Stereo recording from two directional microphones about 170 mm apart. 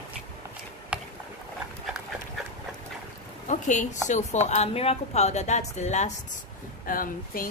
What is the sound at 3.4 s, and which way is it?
A woman's voice, 45° left (ahead or behind).